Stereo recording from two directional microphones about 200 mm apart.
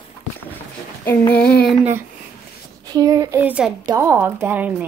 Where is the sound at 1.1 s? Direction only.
5° left (ahead or behind).